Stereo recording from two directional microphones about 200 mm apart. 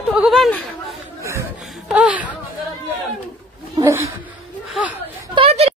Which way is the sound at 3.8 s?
15° right (ahead or behind).